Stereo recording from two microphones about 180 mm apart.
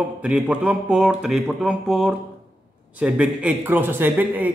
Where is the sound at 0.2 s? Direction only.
5° right (ahead or behind).